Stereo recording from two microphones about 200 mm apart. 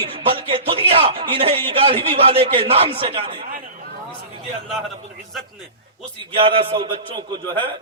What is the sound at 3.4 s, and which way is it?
Chatter, 45° right (ahead or behind).